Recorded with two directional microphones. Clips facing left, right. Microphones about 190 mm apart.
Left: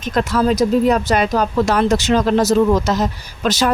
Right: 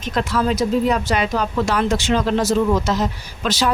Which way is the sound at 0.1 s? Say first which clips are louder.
Left 4 dB; 45° left (ahead or behind).